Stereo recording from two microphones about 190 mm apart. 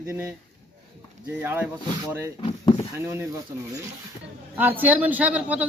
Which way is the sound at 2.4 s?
20° left (ahead or behind).